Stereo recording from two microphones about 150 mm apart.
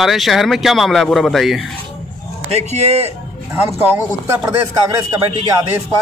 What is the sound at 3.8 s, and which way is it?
Speech, 15° right (ahead or behind).